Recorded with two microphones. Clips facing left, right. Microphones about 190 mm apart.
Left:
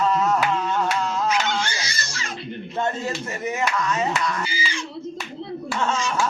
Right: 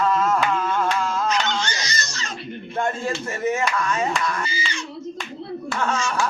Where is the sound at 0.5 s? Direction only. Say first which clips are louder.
Right 1 dB; 20° left (ahead or behind).